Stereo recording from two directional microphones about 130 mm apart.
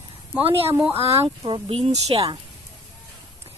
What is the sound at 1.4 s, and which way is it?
Speech, 40° right (ahead or behind).